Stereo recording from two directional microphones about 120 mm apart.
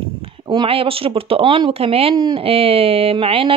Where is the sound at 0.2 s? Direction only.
50° right (ahead or behind).